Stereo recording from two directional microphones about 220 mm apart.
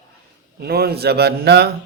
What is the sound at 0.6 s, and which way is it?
Speech, 45° right (ahead or behind).